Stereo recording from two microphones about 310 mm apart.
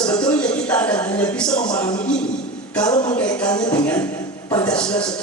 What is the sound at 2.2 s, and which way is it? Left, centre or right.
Speech, left.